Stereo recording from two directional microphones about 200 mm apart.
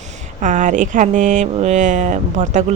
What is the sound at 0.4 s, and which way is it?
Speech, 40° right (ahead or behind).